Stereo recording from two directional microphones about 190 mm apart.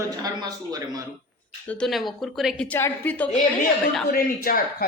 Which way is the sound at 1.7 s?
Centre (ahead or behind).